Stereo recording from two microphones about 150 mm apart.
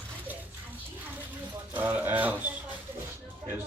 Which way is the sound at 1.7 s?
10° right (ahead or behind).